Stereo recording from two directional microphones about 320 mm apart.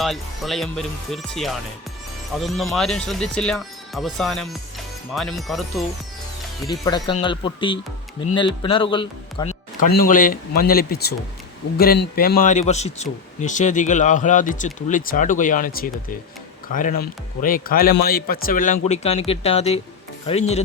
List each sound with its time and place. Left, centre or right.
0.0 s speech: centre
6.7 s speech: centre